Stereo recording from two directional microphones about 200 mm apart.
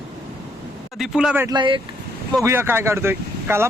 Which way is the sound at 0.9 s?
Centre (ahead or behind).